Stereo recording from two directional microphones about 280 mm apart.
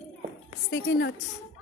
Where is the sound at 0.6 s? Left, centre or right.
Left.